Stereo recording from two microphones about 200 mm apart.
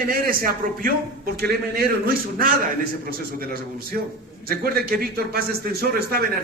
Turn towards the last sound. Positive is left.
turn(degrees=-50)  # may be behind; listen again after turning